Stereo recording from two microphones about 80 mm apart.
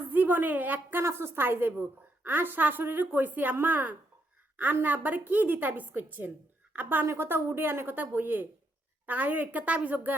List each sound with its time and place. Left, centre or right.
0.1 s a woman's voice: right